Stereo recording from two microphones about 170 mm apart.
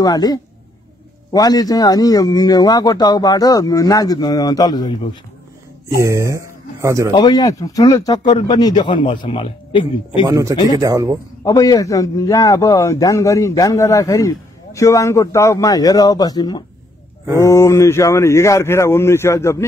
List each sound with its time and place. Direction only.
0.0 s a man's voice: 20° left (ahead or behind)
6.0 s speech: 15° right (ahead or behind)
7.2 s a man's voice: 20° left (ahead or behind)
10.2 s speech: 20° right (ahead or behind)
10.5 s a man's voice: 25° left (ahead or behind)
10.8 s speech: 20° right (ahead or behind)
11.4 s a man's voice: 20° left (ahead or behind)